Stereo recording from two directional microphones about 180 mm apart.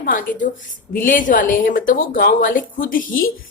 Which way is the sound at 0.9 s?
50° left (ahead or behind).